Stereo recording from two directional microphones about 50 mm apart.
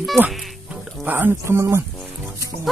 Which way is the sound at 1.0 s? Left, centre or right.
Right.